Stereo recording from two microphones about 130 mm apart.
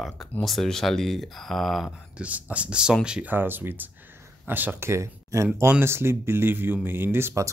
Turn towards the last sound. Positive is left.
turn(degrees=-20)  # may be behind; listen again after turning